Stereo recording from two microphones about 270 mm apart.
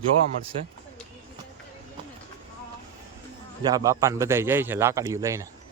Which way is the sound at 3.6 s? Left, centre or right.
Centre.